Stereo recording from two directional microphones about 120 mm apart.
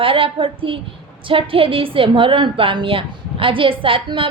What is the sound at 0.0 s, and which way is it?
A woman's voice, 50° right (ahead or behind).